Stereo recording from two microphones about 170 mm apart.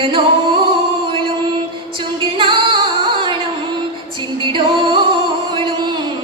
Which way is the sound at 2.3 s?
30° right (ahead or behind).